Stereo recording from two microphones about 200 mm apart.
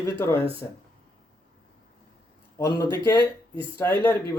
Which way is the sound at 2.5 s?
15° left (ahead or behind).